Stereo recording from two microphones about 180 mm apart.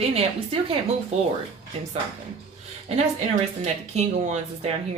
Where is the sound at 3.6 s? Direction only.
40° right (ahead or behind).